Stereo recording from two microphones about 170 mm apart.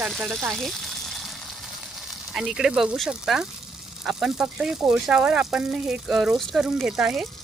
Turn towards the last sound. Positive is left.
turn(degrees=0)  # may be behind; listen again after turning